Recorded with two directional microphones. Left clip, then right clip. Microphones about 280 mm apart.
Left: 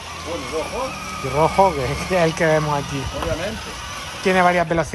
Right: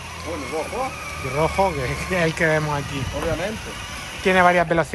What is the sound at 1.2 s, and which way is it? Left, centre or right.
Speech, centre.